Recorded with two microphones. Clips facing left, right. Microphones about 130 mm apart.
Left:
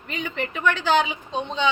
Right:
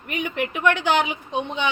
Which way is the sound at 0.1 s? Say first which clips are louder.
Right 3 dB; 15° right (ahead or behind).